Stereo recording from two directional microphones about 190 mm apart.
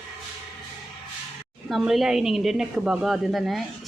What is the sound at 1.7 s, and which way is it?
Speech, centre (ahead or behind).